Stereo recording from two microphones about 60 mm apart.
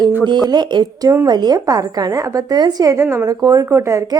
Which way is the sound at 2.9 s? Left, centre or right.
Right.